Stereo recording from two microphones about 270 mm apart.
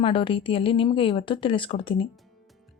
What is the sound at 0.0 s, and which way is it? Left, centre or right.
A woman's voice, centre.